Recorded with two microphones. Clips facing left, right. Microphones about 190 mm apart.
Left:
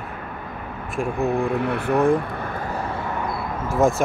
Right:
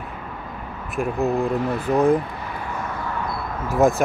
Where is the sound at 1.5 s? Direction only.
60° left (ahead or behind).